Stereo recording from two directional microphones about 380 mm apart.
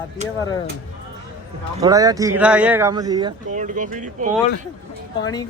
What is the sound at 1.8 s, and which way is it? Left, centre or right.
Speech, centre.